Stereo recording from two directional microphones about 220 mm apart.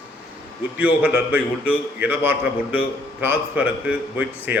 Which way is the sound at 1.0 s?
5° right (ahead or behind).